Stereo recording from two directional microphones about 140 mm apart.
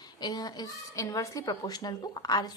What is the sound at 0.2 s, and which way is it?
A woman's voice, 30° left (ahead or behind).